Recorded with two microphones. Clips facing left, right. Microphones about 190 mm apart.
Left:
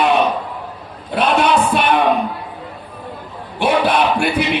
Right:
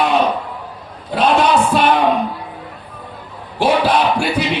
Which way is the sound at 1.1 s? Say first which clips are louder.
Right 1 dB; 60° left (ahead or behind).